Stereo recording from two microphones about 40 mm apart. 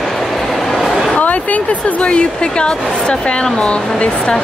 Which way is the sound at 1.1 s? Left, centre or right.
Left.